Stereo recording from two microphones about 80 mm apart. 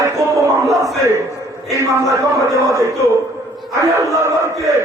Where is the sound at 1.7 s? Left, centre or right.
Right.